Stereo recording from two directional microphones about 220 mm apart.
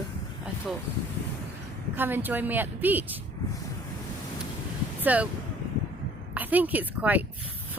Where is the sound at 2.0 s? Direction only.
10° right (ahead or behind).